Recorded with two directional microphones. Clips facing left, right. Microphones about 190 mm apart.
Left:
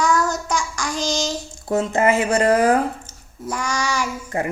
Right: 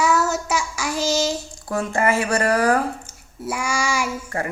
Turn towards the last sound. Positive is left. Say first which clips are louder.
# even
turn(degrees=-10)  # may be behind; listen again after turning